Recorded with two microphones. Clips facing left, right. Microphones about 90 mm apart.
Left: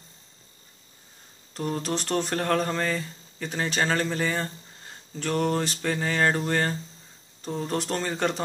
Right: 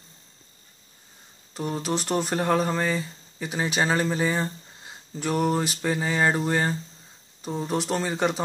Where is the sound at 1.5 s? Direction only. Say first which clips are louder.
Right 1 dB; 5° right (ahead or behind).